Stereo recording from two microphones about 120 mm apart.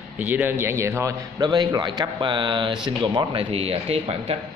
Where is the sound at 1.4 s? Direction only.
35° right (ahead or behind).